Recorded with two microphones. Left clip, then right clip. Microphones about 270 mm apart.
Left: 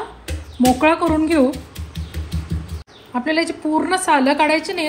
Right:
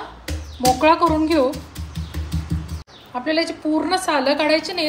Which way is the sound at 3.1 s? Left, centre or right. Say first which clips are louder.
Left 2 dB; left.